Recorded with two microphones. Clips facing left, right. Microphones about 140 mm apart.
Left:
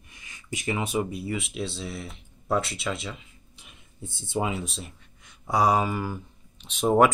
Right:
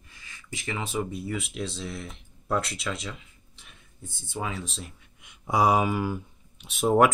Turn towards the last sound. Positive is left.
turn(degrees=0)  # may be behind; listen again after turning